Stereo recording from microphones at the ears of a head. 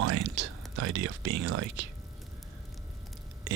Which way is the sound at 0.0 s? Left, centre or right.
Right.